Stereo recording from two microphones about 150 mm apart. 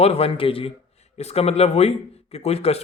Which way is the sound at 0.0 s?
40° left (ahead or behind).